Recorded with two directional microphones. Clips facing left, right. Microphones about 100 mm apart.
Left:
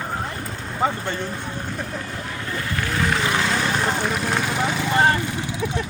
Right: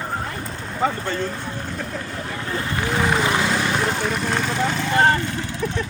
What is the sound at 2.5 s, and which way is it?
Speech, 20° right (ahead or behind).